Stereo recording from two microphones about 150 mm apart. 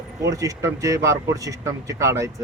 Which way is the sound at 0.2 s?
20° right (ahead or behind).